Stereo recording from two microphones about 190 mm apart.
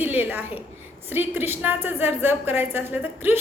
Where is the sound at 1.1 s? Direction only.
10° right (ahead or behind).